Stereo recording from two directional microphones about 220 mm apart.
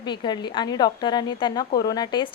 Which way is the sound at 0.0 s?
20° left (ahead or behind).